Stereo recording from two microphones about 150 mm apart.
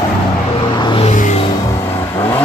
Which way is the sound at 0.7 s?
30° left (ahead or behind).